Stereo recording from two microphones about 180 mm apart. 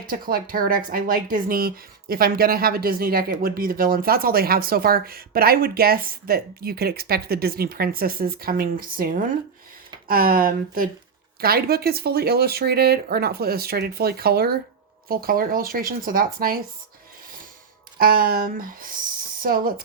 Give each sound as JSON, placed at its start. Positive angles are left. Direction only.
{"t": 0.1, "sound": "speech", "side_deg": -55}
{"t": 18.0, "sound": "speech", "side_deg": -55}